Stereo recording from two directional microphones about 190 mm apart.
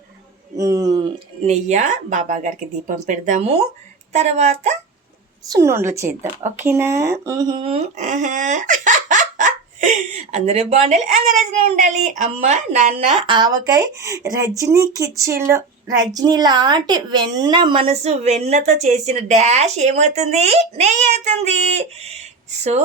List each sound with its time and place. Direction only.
0.5 s a sound: 20° right (ahead or behind)
1.5 s speech: 40° right (ahead or behind)
5.5 s a woman's voice: 15° right (ahead or behind); by 12.9 s 40° right (ahead or behind)
13.2 s speech: 25° right (ahead or behind)